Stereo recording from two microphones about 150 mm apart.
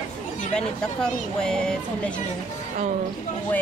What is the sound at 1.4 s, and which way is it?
Speech, 5° left (ahead or behind).